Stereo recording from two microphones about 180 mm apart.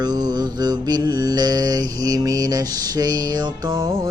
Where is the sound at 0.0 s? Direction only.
20° right (ahead or behind).